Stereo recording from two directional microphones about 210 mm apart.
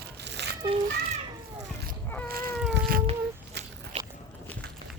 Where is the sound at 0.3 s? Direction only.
55° right (ahead or behind).